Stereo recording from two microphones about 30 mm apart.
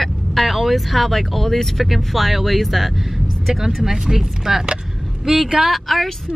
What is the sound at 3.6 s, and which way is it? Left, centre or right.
Speech, centre.